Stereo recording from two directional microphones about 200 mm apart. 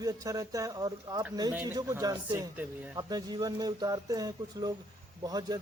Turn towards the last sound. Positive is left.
turn(degrees=-20)  # may be behind; listen again after turning